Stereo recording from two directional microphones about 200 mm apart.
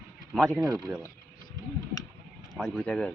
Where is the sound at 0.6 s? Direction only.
15° right (ahead or behind).